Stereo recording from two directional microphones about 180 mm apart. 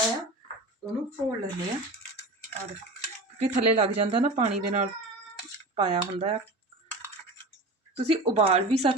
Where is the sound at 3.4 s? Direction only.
35° right (ahead or behind).